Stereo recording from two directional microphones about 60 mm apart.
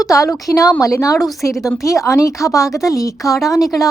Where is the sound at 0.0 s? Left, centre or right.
Left.